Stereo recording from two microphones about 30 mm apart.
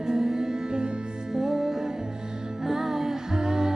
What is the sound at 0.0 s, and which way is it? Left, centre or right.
Music, centre.